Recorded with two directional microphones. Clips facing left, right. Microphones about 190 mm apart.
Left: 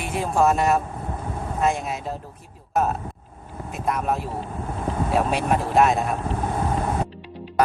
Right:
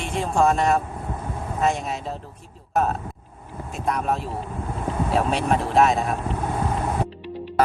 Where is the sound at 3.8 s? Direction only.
Centre (ahead or behind).